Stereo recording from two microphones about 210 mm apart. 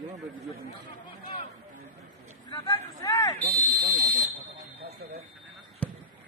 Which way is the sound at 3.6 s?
45° right (ahead or behind).